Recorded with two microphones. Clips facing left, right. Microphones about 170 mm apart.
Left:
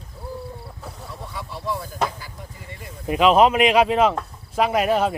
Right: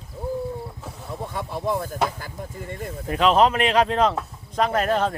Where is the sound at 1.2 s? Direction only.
50° right (ahead or behind).